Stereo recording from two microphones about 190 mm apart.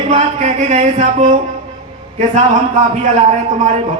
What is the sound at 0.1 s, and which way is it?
A man's voice, 40° right (ahead or behind).